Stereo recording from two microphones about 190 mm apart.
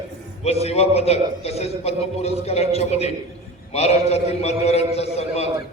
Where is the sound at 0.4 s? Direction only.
35° left (ahead or behind).